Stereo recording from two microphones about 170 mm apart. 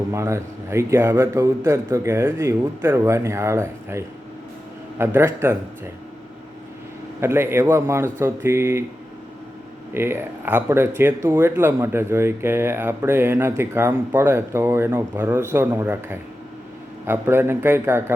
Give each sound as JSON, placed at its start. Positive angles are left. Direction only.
{"t": 0.1, "sound": "speech", "side_deg": -15}
{"t": 7.2, "sound": "speech", "side_deg": -15}
{"t": 9.9, "sound": "speech", "side_deg": -15}